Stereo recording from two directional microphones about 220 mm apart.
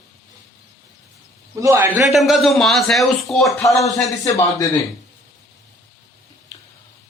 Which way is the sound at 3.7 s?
15° left (ahead or behind).